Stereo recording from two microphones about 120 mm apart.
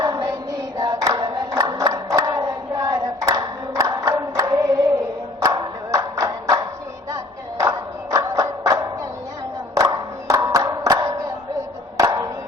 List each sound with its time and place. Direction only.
0.0 s child singing: 30° right (ahead or behind)
0.8 s choir: 30° right (ahead or behind)
5.4 s clapping: 30° right (ahead or behind)
7.6 s music: 25° right (ahead or behind)
11.9 s a sound: 30° right (ahead or behind)